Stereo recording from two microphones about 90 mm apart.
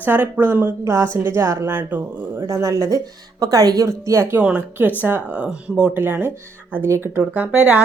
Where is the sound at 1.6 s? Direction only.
20° right (ahead or behind); by 3.8 s 45° right (ahead or behind).